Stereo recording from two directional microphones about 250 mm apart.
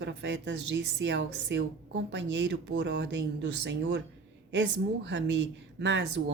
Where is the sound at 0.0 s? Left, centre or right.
Right.